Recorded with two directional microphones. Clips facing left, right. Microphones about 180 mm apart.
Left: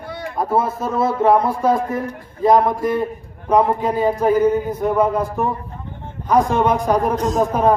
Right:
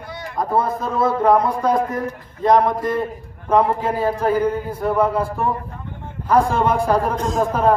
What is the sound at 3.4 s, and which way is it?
A man's voice, 20° left (ahead or behind).